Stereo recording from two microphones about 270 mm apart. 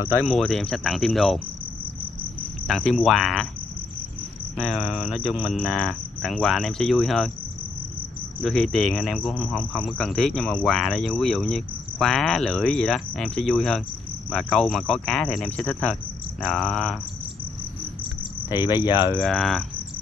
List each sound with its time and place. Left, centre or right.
0.2 s speech: centre
2.7 s speech: centre
4.6 s speech: centre
8.4 s speech: centre
18.5 s speech: centre
19.1 s speech: centre